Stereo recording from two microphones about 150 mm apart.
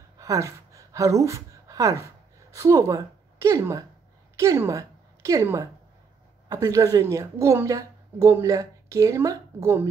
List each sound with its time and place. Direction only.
0.2 s a woman's voice: 20° right (ahead or behind)